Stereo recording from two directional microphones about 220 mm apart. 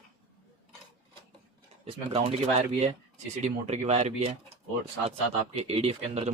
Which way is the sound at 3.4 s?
30° right (ahead or behind).